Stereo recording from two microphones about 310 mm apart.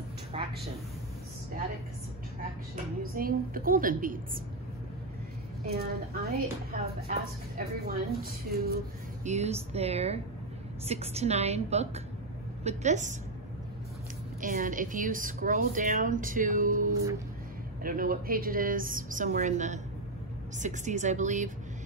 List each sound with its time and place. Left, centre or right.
0.3 s a sound: centre
2.7 s speech: right
5.7 s speech: right
14.4 s speech: right